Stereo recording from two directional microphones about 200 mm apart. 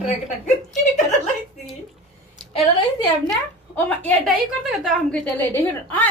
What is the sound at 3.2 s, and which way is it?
A woman's voice, 10° left (ahead or behind).